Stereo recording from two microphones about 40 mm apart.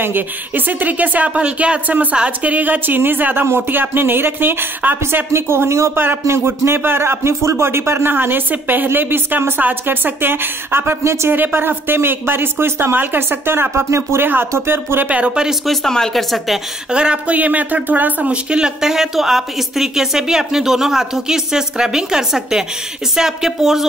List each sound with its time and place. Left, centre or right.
0.0 s speech: right
1.3 s speech: right
3.0 s a woman's voice: right
12.9 s speech: right
15.0 s speech: right
15.6 s a woman's voice: centre
16.9 s speech: right
17.4 s speech: right
18.3 s speech: right
18.8 s speech: centre